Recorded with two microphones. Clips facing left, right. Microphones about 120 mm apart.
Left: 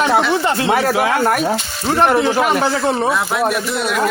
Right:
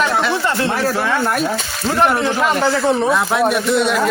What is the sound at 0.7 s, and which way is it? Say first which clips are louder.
Speech: left 3 dB; 70° left (ahead or behind).